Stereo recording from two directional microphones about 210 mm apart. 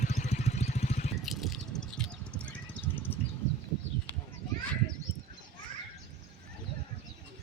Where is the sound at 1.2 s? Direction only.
Centre (ahead or behind).